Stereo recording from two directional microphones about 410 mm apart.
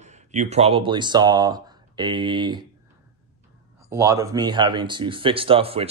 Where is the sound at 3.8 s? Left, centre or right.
Centre.